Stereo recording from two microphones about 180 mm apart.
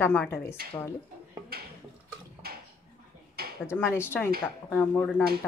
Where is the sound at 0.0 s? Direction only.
10° left (ahead or behind).